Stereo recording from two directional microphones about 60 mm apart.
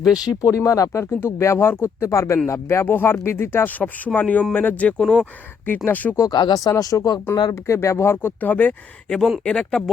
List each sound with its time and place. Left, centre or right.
0.3 s speech: left
1.2 s speech: left
2.8 s speech: left
3.7 s speech: left
4.9 s speech: centre
5.2 s speech: left
6.1 s speech: left
7.3 s speech: left
8.4 s speech: left
9.0 s speech: centre